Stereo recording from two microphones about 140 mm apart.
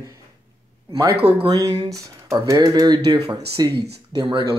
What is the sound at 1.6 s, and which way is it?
Speech, 25° right (ahead or behind).